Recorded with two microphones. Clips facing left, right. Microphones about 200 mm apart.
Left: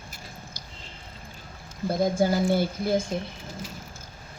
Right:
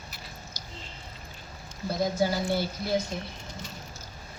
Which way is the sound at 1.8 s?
50° left (ahead or behind).